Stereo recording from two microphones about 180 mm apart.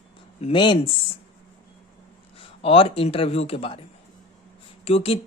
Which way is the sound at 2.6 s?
30° left (ahead or behind).